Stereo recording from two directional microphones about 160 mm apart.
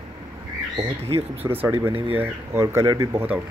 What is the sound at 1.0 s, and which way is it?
Speech, 40° right (ahead or behind).